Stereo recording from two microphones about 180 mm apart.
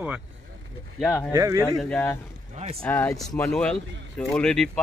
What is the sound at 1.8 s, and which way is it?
Speech, 10° left (ahead or behind).